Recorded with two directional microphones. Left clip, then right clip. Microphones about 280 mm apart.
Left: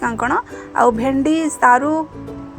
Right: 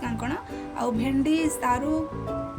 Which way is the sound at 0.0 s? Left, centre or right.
Left.